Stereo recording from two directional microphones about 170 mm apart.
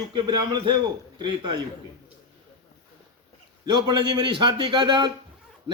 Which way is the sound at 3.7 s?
25° right (ahead or behind).